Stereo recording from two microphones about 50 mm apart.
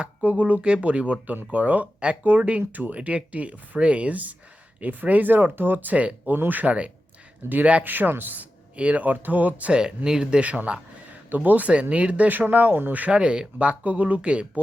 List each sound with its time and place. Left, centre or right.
0.0 s speech: right
7.9 s speech: right
8.7 s speech: right
9.7 s speech: centre
10.4 s speech: right